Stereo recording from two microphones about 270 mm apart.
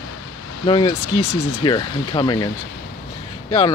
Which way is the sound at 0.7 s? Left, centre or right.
Centre.